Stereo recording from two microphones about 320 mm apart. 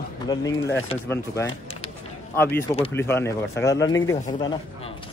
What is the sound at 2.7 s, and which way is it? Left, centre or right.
Speech, centre.